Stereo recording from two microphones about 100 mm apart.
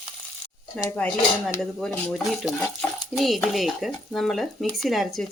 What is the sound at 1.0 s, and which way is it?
Speech, 5° left (ahead or behind).